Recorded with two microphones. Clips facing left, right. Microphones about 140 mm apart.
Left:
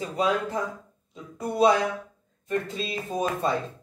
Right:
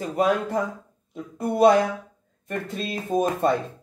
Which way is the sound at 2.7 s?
55° right (ahead or behind).